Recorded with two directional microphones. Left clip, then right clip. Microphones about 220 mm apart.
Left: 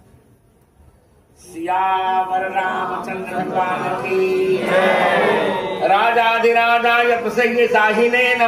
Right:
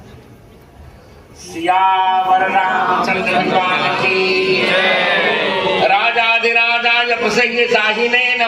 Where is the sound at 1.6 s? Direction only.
40° left (ahead or behind).